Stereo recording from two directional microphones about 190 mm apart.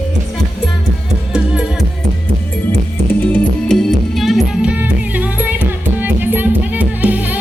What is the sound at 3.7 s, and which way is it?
Music, centre (ahead or behind).